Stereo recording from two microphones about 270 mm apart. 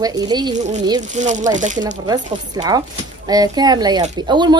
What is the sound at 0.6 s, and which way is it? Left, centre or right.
Speech, right.